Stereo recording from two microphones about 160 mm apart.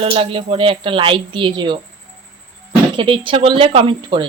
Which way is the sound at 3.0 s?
30° right (ahead or behind).